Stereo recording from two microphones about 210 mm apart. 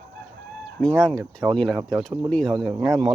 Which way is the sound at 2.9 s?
15° right (ahead or behind).